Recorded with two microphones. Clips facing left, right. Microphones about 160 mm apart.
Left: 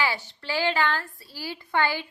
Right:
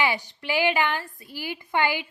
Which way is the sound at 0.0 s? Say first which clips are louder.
Right 2 dB; 15° right (ahead or behind).